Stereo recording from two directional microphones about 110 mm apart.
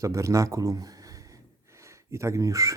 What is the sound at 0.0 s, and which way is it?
Speech, 30° right (ahead or behind).